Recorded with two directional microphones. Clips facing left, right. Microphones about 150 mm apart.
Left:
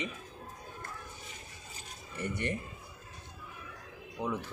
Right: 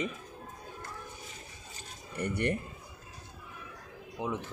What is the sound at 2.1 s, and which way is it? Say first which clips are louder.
Speech: right 4 dB; 60° right (ahead or behind).